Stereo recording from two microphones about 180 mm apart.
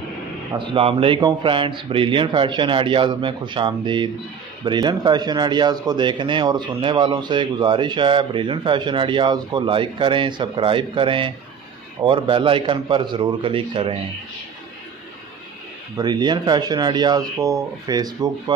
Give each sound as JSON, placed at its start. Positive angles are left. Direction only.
{"t": 0.5, "sound": "speech", "side_deg": -30}
{"t": 16.0, "sound": "speech", "side_deg": -25}